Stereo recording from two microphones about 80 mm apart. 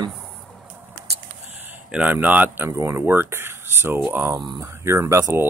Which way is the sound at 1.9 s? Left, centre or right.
Centre.